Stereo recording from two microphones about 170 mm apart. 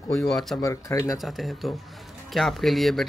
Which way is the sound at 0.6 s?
20° left (ahead or behind).